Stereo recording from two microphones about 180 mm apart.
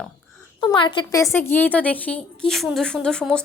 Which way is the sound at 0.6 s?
25° left (ahead or behind).